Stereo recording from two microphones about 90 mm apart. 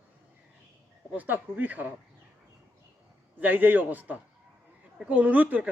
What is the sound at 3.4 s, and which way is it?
A man's voice, 20° right (ahead or behind).